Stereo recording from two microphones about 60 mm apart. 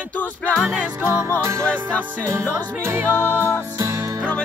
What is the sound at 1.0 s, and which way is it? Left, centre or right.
Music, right.